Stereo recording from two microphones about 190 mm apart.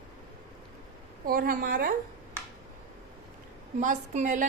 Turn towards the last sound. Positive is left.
turn(degrees=-40)  # may be behind; listen again after turning